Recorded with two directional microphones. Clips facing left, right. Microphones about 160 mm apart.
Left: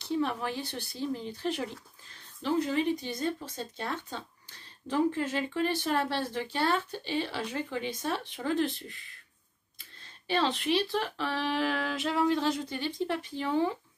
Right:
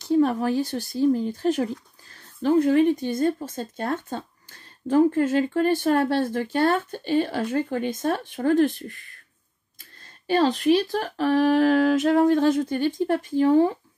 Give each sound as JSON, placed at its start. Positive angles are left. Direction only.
{"t": 0.0, "sound": "speech", "side_deg": -45}